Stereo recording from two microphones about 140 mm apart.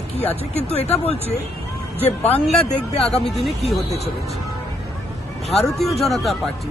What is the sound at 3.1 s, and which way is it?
Speech, 5° left (ahead or behind).